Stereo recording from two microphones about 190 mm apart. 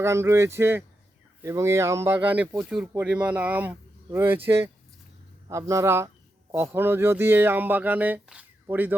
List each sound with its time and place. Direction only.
0.0 s speech: 15° right (ahead or behind)